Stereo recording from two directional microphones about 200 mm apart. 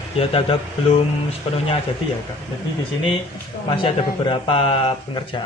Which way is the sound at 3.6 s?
25° left (ahead or behind).